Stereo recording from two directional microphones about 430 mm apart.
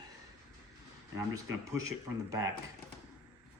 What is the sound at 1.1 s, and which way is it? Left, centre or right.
Speech, centre.